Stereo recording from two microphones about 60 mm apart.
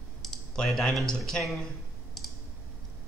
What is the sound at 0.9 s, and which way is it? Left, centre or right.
Speech, centre.